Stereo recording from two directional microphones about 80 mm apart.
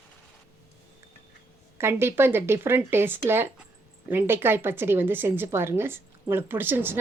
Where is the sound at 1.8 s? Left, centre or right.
Right.